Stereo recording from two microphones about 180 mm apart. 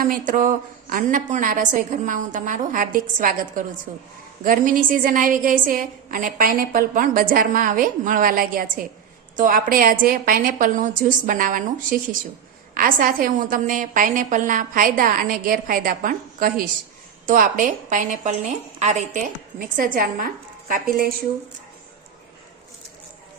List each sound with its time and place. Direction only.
0.0 s a woman's voice: 50° right (ahead or behind)